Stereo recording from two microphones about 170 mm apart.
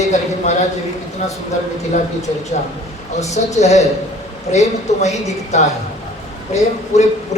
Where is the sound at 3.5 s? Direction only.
40° left (ahead or behind).